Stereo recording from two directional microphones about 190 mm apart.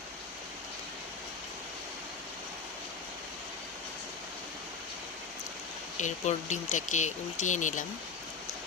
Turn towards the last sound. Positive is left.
turn(degrees=40)  # may be behind; listen again after turning